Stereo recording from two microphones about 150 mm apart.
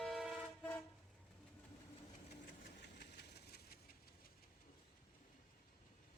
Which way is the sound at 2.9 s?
90° left.